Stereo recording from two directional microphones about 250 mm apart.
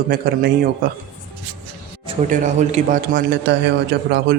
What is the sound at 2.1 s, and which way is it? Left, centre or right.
A man's voice, right.